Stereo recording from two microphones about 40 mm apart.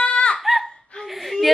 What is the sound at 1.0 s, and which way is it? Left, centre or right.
Speech, centre.